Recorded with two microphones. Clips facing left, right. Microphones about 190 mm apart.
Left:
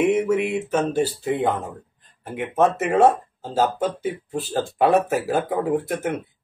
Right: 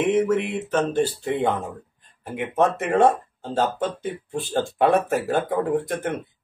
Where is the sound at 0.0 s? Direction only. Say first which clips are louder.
Left 1 dB; 10° left (ahead or behind).